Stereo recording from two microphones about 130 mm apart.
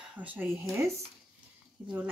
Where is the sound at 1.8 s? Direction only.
15° right (ahead or behind).